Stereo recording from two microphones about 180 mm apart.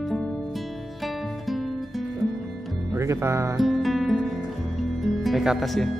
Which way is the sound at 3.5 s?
Centre (ahead or behind).